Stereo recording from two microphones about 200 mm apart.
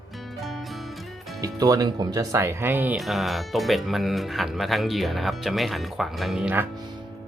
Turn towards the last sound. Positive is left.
turn(degrees=-10)  # may be behind; listen again after turning